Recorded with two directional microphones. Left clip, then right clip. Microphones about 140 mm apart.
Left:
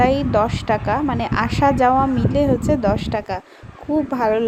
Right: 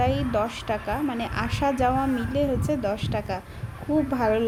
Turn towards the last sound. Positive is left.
turn(degrees=30)  # may be behind; listen again after turning